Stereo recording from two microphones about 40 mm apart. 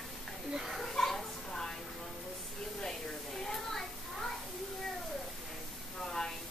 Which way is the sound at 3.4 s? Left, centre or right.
Centre.